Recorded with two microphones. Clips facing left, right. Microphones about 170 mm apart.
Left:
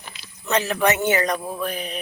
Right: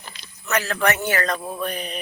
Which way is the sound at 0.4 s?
20° left (ahead or behind).